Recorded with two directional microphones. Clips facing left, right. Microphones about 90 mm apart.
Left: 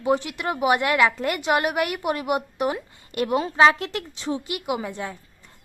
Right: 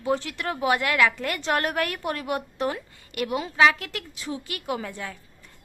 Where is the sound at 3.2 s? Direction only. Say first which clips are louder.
Left 3 dB; 30° left (ahead or behind).